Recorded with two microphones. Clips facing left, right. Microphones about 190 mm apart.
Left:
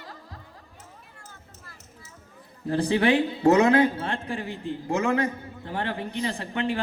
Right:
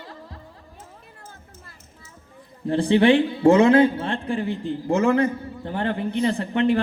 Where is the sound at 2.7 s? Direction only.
30° right (ahead or behind).